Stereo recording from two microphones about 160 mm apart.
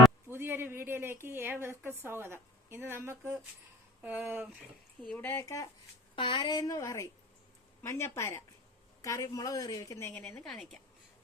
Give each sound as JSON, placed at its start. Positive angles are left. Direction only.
{"t": 0.3, "sound": "a sound", "side_deg": -15}
{"t": 1.6, "sound": "a woman's voice", "side_deg": -15}
{"t": 5.0, "sound": "speech", "side_deg": 10}
{"t": 6.1, "sound": "a woman's voice", "side_deg": 30}